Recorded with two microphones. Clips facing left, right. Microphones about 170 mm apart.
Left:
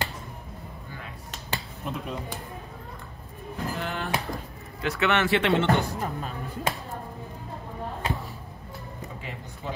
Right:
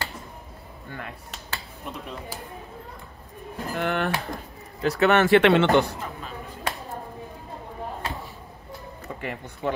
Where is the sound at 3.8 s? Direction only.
65° right (ahead or behind).